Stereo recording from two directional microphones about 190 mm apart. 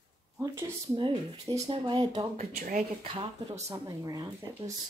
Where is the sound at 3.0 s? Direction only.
30° right (ahead or behind).